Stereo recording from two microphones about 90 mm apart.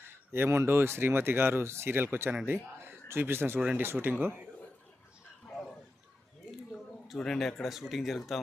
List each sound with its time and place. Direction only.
0.1 s speech: 25° right (ahead or behind)
7.1 s speech: 5° left (ahead or behind)